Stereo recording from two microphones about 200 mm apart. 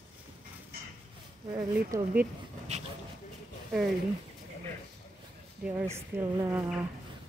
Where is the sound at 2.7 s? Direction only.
35° right (ahead or behind).